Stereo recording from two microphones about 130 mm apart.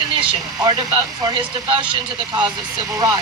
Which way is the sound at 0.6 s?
30° right (ahead or behind).